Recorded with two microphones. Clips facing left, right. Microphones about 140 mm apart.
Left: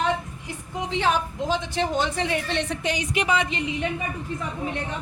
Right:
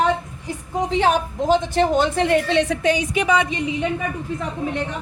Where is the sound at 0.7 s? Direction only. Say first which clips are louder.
Right 5 dB; 45° right (ahead or behind); by 2.8 s 90° right.